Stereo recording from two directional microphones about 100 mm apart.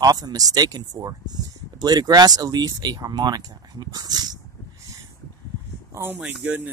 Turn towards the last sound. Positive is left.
turn(degrees=-10)  # may be behind; listen again after turning